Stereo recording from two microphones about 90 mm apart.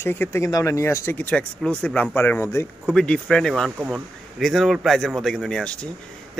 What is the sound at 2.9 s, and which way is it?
Speech, 10° left (ahead or behind).